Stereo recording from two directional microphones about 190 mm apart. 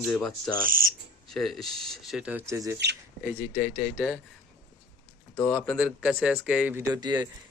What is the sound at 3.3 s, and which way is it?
Speech, 5° right (ahead or behind).